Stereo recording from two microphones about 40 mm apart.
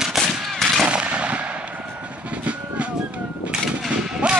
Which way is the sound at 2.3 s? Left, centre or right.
Right.